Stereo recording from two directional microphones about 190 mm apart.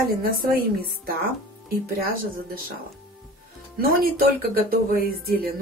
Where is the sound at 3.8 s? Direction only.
50° right (ahead or behind).